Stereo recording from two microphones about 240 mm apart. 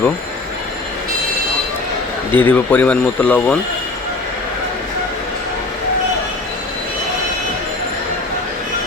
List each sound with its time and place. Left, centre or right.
2.3 s speech: centre